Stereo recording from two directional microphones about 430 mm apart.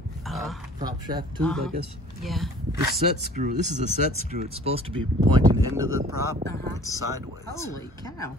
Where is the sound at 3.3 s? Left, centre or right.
Centre.